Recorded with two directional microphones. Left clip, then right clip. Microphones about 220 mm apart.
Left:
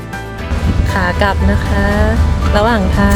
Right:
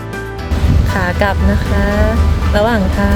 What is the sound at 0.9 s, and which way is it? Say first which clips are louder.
Music: left 1 dB; 5° left (ahead or behind).